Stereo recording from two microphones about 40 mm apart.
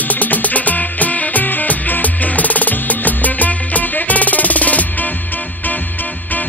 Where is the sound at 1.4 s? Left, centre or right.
Left.